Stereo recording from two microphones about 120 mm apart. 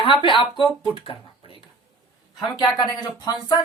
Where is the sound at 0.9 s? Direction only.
50° left (ahead or behind).